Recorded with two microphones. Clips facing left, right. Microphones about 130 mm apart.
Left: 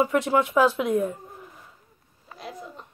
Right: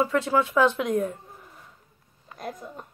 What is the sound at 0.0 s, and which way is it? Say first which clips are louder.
Speech: left 1 dB; 15° left (ahead or behind).